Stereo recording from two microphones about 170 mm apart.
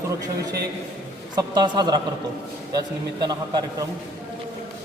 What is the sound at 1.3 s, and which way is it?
A man's voice, 25° right (ahead or behind).